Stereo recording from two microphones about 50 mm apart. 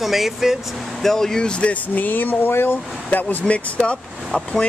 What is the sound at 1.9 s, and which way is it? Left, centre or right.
Speech, left.